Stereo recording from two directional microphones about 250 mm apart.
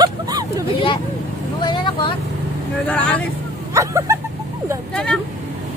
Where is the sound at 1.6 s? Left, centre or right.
Centre.